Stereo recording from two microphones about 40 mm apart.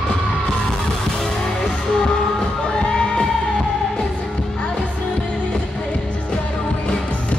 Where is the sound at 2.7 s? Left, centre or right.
Left.